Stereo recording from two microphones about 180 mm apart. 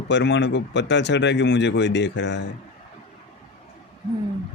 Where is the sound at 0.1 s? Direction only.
75° left (ahead or behind).